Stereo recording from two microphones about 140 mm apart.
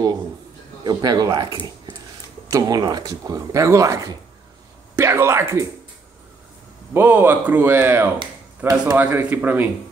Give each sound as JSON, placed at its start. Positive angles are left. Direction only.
{"t": 0.8, "sound": "speech", "side_deg": -25}
{"t": 6.9, "sound": "speech", "side_deg": -15}